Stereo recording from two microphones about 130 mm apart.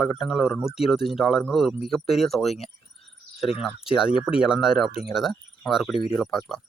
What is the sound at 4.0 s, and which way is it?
Speech, 45° left (ahead or behind).